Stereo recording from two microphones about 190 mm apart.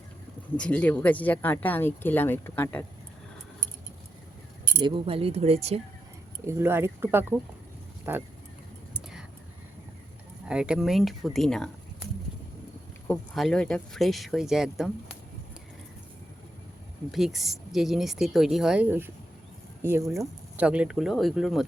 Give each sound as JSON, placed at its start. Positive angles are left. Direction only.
{"t": 0.5, "sound": "speech", "side_deg": 5}
{"t": 4.8, "sound": "speech", "side_deg": -25}
{"t": 6.4, "sound": "speech", "side_deg": -15}
{"t": 10.5, "sound": "speech", "side_deg": -5}
{"t": 13.1, "sound": "speech", "side_deg": 0}
{"t": 17.1, "sound": "speech", "side_deg": 0}